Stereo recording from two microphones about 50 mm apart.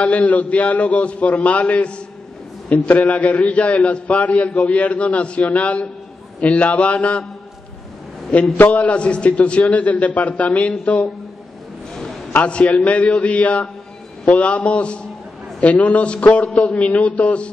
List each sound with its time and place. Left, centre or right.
0.0 s a man's voice: left
8.5 s a man's voice: left
12.4 s a man's voice: left